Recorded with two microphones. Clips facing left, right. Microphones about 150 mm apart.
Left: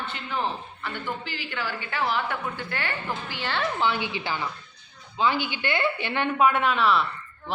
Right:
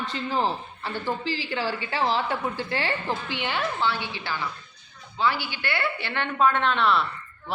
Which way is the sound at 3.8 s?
15° left (ahead or behind).